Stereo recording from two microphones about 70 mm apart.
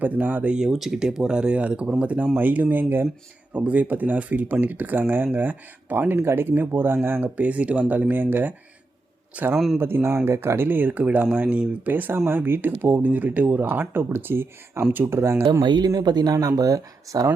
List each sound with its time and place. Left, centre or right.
0.0 s speech: right
0.5 s speech: centre; by 7.3 s right
7.3 s a man's voice: centre
9.7 s speech: right; by 11.8 s centre
11.9 s speech: right
15.2 s speech: right
15.6 s speech: right
15.9 s speech: right